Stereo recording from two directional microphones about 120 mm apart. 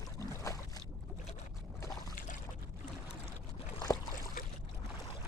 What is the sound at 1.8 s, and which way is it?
Boat, 30° left (ahead or behind).